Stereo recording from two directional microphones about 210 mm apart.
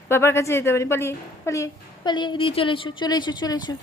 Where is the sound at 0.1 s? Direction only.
10° left (ahead or behind).